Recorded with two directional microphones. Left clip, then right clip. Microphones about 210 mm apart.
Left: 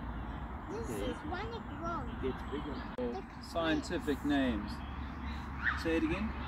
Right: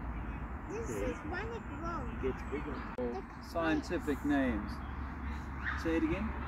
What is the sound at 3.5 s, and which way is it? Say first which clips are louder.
Speech: even; centre (ahead or behind).